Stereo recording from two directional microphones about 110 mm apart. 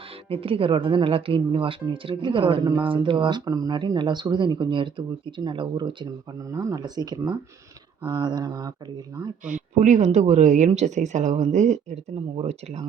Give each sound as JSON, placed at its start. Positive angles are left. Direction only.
{"t": 0.3, "sound": "speech", "side_deg": -55}
{"t": 6.5, "sound": "speech", "side_deg": -30}
{"t": 9.7, "sound": "speech", "side_deg": -90}
{"t": 12.4, "sound": "speech", "side_deg": -70}